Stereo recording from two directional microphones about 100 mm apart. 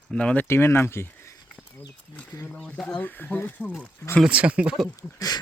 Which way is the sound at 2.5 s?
10° left (ahead or behind).